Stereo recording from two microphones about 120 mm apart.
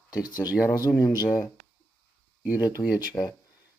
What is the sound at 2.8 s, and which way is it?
Speech, 40° left (ahead or behind).